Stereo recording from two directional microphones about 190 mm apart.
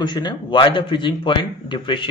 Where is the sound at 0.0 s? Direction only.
25° left (ahead or behind).